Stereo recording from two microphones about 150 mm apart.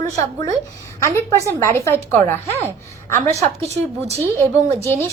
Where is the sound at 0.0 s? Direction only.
20° left (ahead or behind).